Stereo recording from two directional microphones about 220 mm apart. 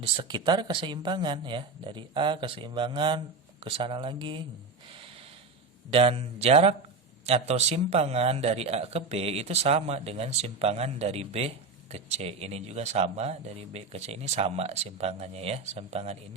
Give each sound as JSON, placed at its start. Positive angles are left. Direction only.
{"t": 0.0, "sound": "a man's voice", "side_deg": -20}
{"t": 5.9, "sound": "a man's voice", "side_deg": -25}